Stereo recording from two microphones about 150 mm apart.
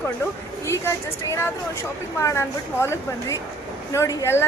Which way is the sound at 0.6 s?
20° left (ahead or behind).